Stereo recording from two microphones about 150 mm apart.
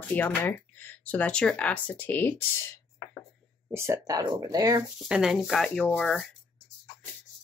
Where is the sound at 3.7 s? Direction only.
20° right (ahead or behind).